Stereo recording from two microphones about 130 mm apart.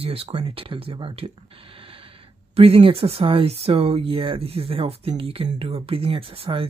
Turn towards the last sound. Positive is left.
turn(degrees=-45)  # may be behind; listen again after turning